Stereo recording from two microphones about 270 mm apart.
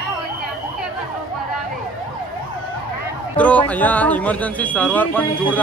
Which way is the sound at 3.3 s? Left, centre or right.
Centre.